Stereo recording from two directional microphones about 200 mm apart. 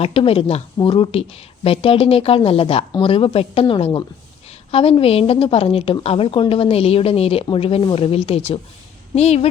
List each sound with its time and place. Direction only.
0.0 s speech: 30° left (ahead or behind)